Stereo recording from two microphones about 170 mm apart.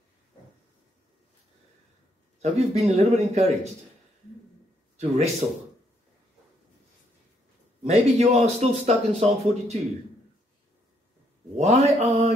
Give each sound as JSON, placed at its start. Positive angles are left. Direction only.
{"t": 2.4, "sound": "speech", "side_deg": -40}
{"t": 4.9, "sound": "speech", "side_deg": -40}
{"t": 7.8, "sound": "speech", "side_deg": -40}
{"t": 11.5, "sound": "speech", "side_deg": -40}